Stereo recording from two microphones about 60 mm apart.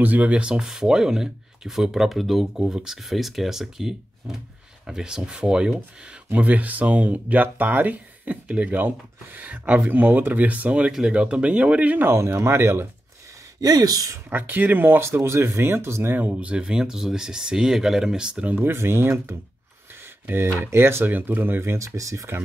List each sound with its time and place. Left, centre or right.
0.0 s speech: right
6.3 s speech: right
12.1 s speech: right
13.6 s speech: right
14.3 s speech: right
15.1 s speech: right
16.1 s speech: right
18.5 s speech: right
20.6 s speech: right